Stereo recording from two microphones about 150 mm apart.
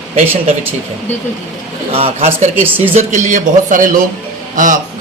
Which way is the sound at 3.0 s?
55° right (ahead or behind).